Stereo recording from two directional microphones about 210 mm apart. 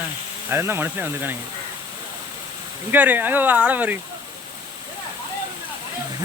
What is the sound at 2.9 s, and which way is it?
Speech, 10° right (ahead or behind).